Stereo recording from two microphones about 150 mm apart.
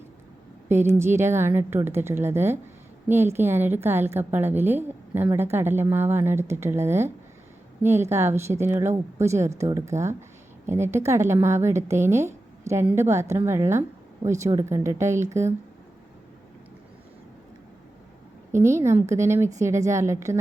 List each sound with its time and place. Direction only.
0.7 s a woman's voice: 15° right (ahead or behind)
18.5 s speech: 20° right (ahead or behind)